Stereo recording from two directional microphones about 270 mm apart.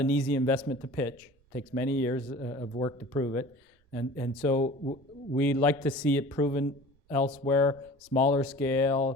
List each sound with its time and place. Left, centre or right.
0.0 s a man's voice: centre
4.5 s speech: left
5.4 s speech: centre
8.1 s speech: left
8.4 s speech: centre